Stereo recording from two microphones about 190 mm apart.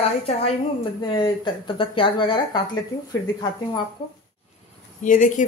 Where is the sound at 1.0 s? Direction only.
25° left (ahead or behind).